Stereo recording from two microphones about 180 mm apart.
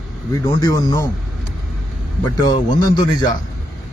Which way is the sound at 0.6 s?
20° left (ahead or behind).